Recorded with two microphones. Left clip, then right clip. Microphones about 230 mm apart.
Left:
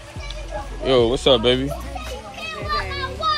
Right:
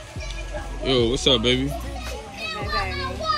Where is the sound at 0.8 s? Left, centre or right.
Centre.